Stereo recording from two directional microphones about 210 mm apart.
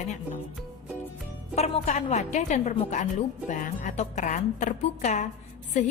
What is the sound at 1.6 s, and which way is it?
A woman's voice, 30° left (ahead or behind).